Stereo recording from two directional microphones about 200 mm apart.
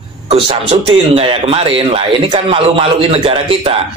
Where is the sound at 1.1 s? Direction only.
30° right (ahead or behind).